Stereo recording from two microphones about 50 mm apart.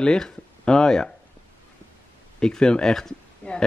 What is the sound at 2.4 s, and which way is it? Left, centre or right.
Speech, centre.